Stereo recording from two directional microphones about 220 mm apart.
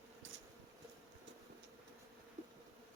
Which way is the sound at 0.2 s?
60° right (ahead or behind).